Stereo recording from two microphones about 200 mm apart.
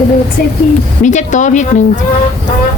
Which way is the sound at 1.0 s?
40° left (ahead or behind).